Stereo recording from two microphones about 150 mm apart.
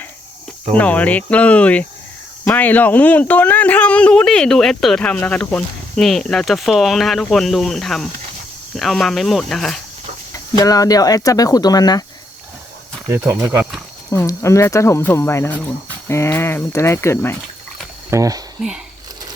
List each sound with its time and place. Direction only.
0.8 s speech: 10° left (ahead or behind)
10.6 s speech: 25° left (ahead or behind)
13.1 s speech: 20° right (ahead or behind)
14.1 s speech: 20° left (ahead or behind)
18.1 s speech: 25° right (ahead or behind)